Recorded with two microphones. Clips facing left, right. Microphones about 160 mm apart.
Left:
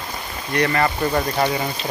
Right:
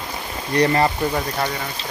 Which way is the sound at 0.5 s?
30° right (ahead or behind).